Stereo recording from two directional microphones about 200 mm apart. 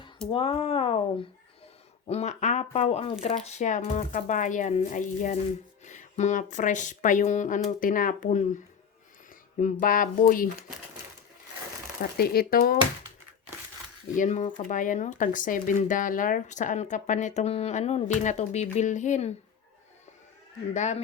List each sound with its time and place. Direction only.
0.3 s speech: 30° left (ahead or behind)
2.0 s speech: 35° left (ahead or behind)
9.6 s speech: 40° left (ahead or behind)
12.1 s speech: 50° left (ahead or behind)
14.2 s speech: 40° left (ahead or behind)
20.7 s speech: 35° left (ahead or behind)